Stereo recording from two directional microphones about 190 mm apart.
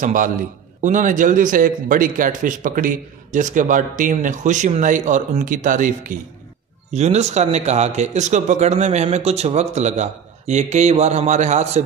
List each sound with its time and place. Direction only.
0.0 s speech: 45° right (ahead or behind)